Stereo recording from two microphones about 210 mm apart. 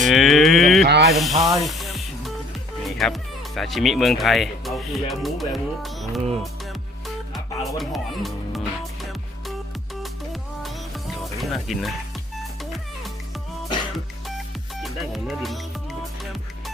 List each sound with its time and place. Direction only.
0.0 s a sound: centre (ahead or behind)
0.9 s snake: 55° right (ahead or behind)
1.1 s speech: centre (ahead or behind)
1.6 s music: centre (ahead or behind)
2.8 s speech: centre (ahead or behind)
7.3 s music: centre (ahead or behind)
10.6 s music: centre (ahead or behind)
14.8 s music: centre (ahead or behind)